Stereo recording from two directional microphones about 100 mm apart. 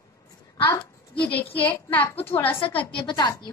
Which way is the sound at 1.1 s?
15° left (ahead or behind).